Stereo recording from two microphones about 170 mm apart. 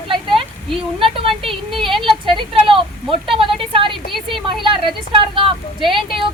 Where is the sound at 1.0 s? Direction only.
30° right (ahead or behind).